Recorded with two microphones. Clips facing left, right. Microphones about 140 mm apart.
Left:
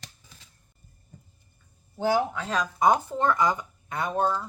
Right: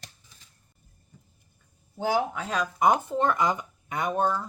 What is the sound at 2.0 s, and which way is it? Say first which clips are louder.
Speech: left 2 dB; 10° right (ahead or behind).